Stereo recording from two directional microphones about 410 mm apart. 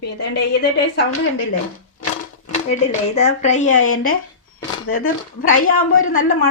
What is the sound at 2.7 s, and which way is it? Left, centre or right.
A woman's voice, centre.